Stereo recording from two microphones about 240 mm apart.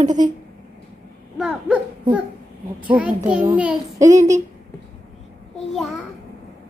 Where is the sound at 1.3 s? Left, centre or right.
Centre.